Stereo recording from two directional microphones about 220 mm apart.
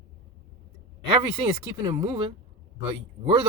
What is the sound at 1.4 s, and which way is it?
Speech, 25° right (ahead or behind).